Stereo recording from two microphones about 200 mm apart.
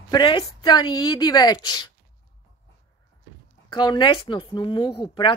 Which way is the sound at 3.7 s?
20° left (ahead or behind).